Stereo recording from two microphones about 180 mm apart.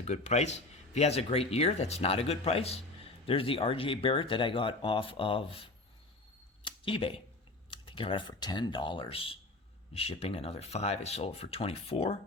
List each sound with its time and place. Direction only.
0.0 s speech: 35° left (ahead or behind)
6.7 s speech: 30° left (ahead or behind)